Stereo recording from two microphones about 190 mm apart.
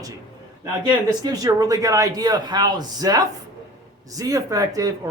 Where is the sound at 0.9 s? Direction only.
20° right (ahead or behind).